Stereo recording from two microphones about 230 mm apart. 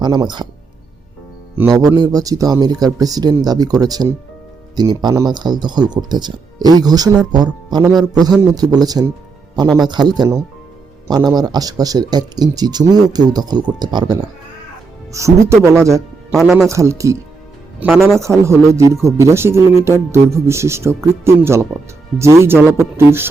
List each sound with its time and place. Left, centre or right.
0.0 s speech: centre
1.5 s speech: centre
7.9 s speech: centre
8.3 s speech: centre
16.3 s speech: centre
16.6 s speech: centre
18.2 s speech: centre